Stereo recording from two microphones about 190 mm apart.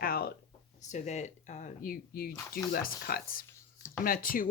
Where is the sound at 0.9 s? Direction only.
35° left (ahead or behind).